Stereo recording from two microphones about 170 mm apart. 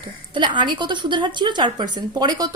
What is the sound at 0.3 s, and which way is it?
A woman's voice, 25° right (ahead or behind).